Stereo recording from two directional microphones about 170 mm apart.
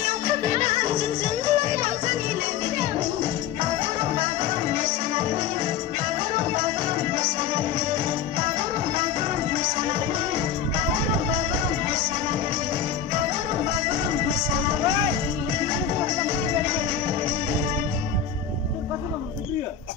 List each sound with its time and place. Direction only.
0.0 s music: 50° right (ahead or behind)
4.1 s music: 45° right (ahead or behind)
9.5 s music: 35° right (ahead or behind)